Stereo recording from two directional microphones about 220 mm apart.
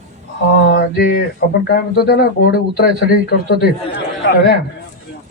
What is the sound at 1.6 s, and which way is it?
Speech, 45° left (ahead or behind).